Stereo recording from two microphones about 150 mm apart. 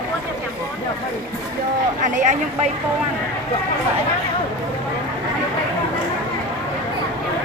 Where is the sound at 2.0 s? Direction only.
55° right (ahead or behind).